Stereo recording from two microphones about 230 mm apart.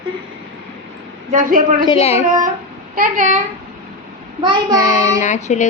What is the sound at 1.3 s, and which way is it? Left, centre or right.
Speech, right.